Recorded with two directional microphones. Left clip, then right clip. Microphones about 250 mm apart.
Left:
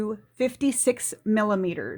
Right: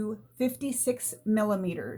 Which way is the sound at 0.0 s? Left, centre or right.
Left.